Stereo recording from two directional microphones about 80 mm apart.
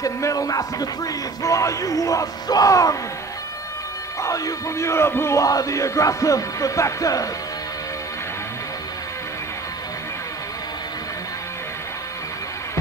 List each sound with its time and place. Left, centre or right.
0.0 s music: left
4.2 s a man's voice: left
5.4 s music: left